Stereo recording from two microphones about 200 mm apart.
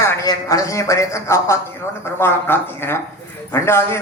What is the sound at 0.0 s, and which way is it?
A man's voice, 15° left (ahead or behind).